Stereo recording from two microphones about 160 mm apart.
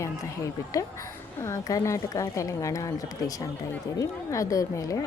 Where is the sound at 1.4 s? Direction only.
20° left (ahead or behind).